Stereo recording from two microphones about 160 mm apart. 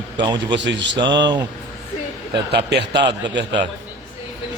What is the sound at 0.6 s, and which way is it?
Speech, 90° right.